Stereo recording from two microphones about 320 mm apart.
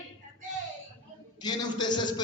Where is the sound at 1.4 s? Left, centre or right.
Centre.